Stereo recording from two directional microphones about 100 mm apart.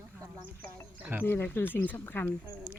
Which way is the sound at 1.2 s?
20° left (ahead or behind).